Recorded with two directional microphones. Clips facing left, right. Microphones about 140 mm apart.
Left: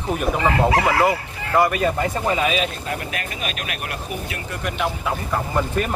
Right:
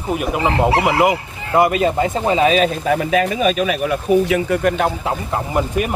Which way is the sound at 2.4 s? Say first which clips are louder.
Right 7 dB; 40° right (ahead or behind).